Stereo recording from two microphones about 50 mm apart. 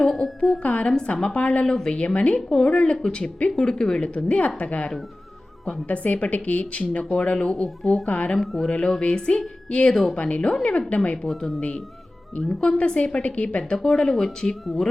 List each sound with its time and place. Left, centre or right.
0.6 s speech: left
0.9 s speech: centre
1.6 s speech: centre
2.0 s speech: left
2.5 s speech: centre
2.7 s speech: left
9.9 s speech: centre
10.2 s speech: left
12.4 s speech: centre
13.7 s speech: centre